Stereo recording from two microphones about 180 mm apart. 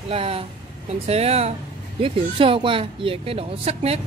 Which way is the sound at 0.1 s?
30° right (ahead or behind).